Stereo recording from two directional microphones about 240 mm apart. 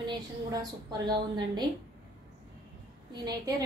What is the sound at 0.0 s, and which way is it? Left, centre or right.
A woman's voice, centre.